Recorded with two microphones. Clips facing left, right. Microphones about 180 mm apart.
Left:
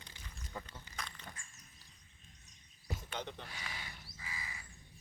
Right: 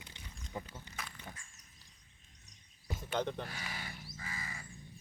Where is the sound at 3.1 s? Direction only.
55° right (ahead or behind).